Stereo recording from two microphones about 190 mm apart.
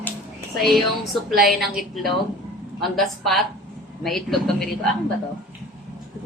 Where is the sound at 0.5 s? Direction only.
Centre (ahead or behind).